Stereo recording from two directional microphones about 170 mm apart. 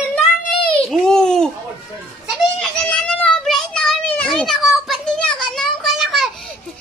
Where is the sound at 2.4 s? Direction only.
Centre (ahead or behind).